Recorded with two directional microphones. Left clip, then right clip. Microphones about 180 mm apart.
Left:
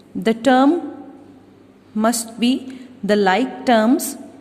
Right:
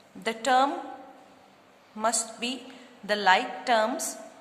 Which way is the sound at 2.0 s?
35° left (ahead or behind).